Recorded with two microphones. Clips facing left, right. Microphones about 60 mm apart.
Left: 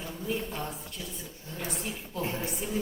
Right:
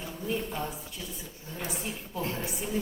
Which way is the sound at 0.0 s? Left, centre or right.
Centre.